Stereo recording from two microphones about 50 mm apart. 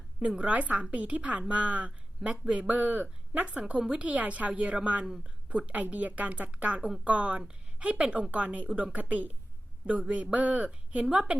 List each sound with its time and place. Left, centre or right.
0.2 s a woman's voice: right
3.5 s a woman's voice: right
10.3 s a woman's voice: right